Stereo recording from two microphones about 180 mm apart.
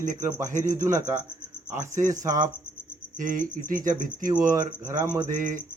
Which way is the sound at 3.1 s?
50° right (ahead or behind).